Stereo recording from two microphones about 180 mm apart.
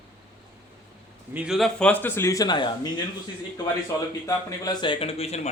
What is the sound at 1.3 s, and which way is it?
A man's voice, 5° right (ahead or behind).